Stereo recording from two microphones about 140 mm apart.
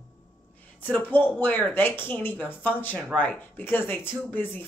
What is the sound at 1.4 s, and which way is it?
A woman's voice, 15° left (ahead or behind).